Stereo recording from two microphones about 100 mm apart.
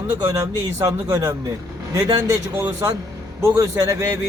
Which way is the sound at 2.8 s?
30° right (ahead or behind).